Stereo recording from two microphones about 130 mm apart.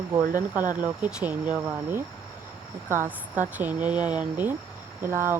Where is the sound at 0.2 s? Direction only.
90° right.